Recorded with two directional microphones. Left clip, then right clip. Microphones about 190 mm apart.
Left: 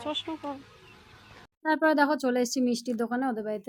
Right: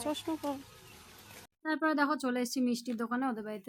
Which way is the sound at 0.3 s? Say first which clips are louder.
Even; 30° right (ahead or behind).